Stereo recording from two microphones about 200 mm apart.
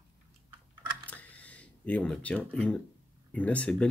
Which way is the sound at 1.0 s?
10° left (ahead or behind).